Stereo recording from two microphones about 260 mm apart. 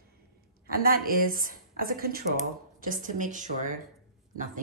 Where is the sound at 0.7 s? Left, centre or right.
Right.